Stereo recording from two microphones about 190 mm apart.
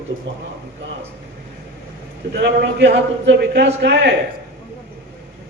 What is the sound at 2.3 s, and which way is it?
A man's voice, 65° right (ahead or behind).